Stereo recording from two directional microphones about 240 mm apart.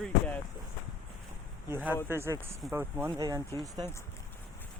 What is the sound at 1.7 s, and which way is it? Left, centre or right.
Speech, centre.